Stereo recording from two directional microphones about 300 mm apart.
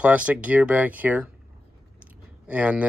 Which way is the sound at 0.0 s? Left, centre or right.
Centre.